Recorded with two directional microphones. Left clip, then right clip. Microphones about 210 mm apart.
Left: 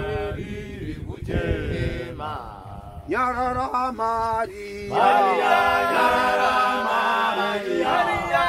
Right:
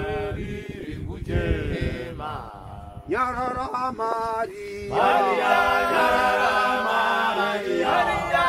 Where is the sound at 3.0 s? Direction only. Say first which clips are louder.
Left 2 dB; 45° left (ahead or behind).